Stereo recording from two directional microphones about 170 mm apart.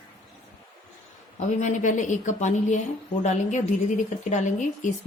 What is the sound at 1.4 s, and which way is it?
A woman's voice, 45° left (ahead or behind).